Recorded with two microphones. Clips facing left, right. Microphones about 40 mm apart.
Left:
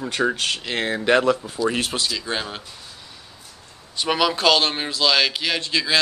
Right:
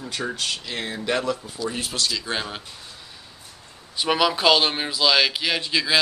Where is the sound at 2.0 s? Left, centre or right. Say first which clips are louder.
Left 1 dB; centre.